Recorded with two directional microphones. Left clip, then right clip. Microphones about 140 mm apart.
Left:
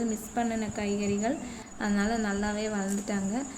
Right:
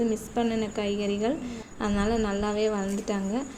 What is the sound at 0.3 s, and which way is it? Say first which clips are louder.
A woman's voice: right 1 dB; 15° right (ahead or behind).